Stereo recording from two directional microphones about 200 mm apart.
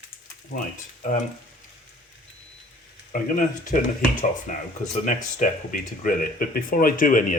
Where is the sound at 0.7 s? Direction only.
40° left (ahead or behind).